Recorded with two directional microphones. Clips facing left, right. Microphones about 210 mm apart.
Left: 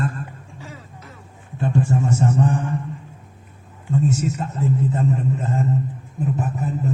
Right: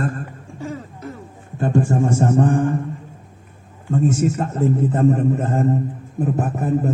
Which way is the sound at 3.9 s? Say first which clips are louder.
Right 3 dB; 50° right (ahead or behind).